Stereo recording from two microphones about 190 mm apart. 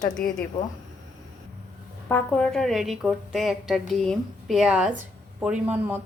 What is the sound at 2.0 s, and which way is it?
A woman's voice, 10° left (ahead or behind).